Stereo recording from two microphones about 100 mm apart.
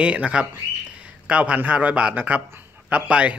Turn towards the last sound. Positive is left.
turn(degrees=-10)  # may be behind; listen again after turning